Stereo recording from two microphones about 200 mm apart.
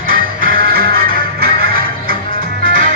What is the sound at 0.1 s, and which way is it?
Music, 45° right (ahead or behind).